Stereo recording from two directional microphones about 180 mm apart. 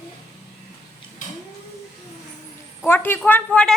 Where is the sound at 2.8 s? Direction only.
10° left (ahead or behind).